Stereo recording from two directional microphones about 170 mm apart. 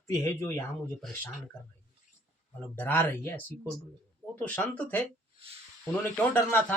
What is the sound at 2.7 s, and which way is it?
Speech, 10° left (ahead or behind).